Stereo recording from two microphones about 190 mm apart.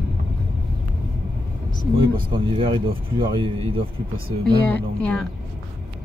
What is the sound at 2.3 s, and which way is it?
Speech, 25° right (ahead or behind).